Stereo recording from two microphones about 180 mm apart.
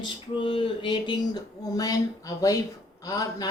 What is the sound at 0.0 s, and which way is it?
A woman's voice, 25° left (ahead or behind).